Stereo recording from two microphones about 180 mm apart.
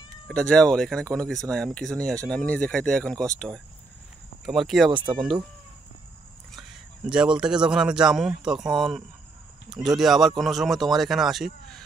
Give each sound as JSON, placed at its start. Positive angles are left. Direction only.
{"t": 0.3, "sound": "speech", "side_deg": 5}
{"t": 4.9, "sound": "speech", "side_deg": -25}
{"t": 6.5, "sound": "a man's voice", "side_deg": -5}